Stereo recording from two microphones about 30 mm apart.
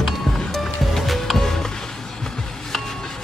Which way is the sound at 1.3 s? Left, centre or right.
Centre.